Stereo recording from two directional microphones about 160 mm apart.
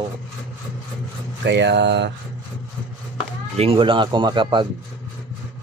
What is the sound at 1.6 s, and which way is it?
Speech, 90° right.